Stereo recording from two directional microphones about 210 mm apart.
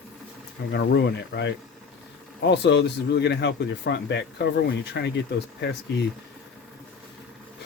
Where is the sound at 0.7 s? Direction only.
55° left (ahead or behind).